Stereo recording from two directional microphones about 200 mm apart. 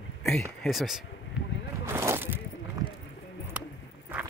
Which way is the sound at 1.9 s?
10° right (ahead or behind).